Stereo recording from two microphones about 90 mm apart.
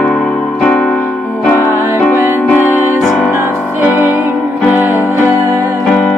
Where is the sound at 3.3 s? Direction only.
25° right (ahead or behind).